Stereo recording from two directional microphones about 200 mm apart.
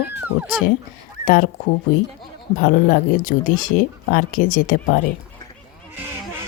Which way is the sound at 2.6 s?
40° left (ahead or behind).